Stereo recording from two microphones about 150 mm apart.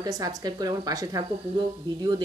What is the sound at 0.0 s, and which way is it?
Speech, 25° right (ahead or behind).